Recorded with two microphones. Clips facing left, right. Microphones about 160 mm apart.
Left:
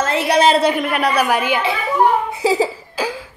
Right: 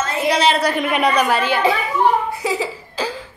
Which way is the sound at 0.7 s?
Centre (ahead or behind).